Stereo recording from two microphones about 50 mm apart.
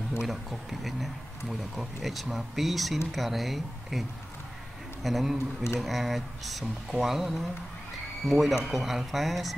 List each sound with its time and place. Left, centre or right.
0.3 s speech: centre
5.0 s speech: centre